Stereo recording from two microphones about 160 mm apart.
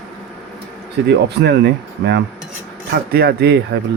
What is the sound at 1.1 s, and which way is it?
Speech, 90° right.